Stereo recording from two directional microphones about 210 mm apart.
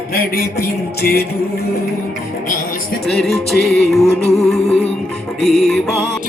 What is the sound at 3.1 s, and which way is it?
Music, centre (ahead or behind).